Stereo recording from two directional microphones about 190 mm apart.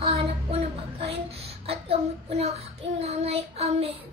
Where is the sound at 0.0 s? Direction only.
30° right (ahead or behind).